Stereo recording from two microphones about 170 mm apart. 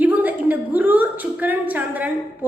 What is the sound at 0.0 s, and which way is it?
A woman's voice, 10° right (ahead or behind).